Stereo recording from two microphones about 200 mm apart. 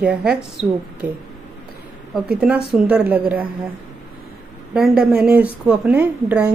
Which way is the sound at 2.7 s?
5° right (ahead or behind).